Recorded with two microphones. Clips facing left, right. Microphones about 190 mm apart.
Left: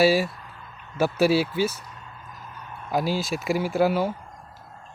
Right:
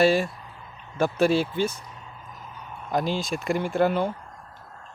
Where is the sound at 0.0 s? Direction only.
5° left (ahead or behind).